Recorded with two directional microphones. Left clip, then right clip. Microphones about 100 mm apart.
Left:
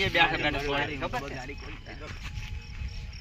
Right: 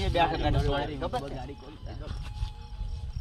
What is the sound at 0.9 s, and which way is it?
Speech, 20° right (ahead or behind).